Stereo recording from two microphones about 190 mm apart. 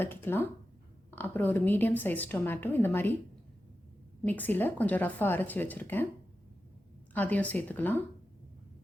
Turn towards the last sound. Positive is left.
turn(degrees=10)  # may be behind; listen again after turning